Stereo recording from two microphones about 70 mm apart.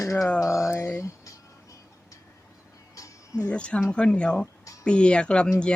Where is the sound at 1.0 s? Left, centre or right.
Left.